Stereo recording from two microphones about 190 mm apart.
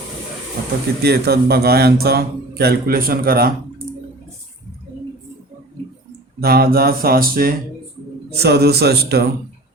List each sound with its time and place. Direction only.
1.0 s a man's voice: 55° right (ahead or behind)
6.4 s a sound: 55° right (ahead or behind)
8.3 s a man's voice: 60° right (ahead or behind)